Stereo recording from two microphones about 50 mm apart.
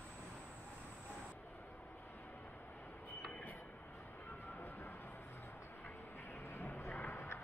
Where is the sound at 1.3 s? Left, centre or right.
Left.